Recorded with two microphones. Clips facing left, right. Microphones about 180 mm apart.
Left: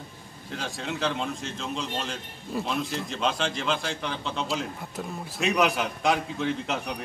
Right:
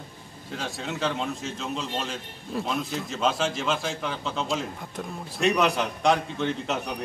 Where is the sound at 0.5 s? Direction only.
Centre (ahead or behind).